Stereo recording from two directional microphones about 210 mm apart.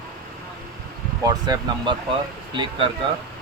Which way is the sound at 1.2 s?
20° right (ahead or behind).